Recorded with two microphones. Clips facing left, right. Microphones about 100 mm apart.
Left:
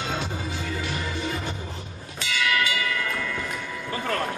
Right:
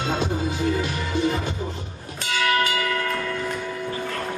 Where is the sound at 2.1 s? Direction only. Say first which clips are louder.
Right 3 dB; 45° right (ahead or behind).